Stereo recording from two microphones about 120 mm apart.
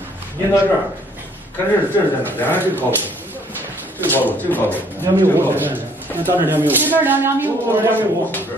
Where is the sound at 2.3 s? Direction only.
15° left (ahead or behind).